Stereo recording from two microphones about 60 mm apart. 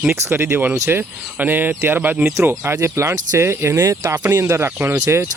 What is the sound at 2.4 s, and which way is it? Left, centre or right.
Speech, right.